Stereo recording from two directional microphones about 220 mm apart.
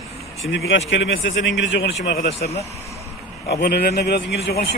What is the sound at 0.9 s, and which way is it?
A man's voice, 55° left (ahead or behind).